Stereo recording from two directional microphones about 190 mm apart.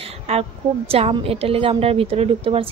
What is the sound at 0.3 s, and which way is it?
A woman's voice, 30° right (ahead or behind).